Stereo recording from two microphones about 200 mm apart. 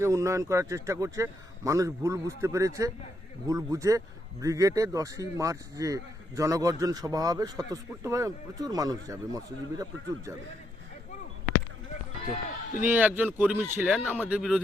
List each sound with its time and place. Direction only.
0.0 s speech: 15° right (ahead or behind)
12.8 s speech: 10° right (ahead or behind)